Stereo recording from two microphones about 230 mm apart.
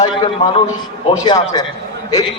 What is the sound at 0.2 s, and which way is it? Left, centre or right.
A man's voice, left.